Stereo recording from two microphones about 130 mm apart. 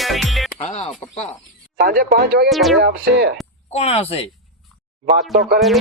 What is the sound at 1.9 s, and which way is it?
Speech, 90° right.